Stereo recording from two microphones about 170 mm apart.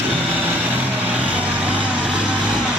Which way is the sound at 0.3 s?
10° right (ahead or behind).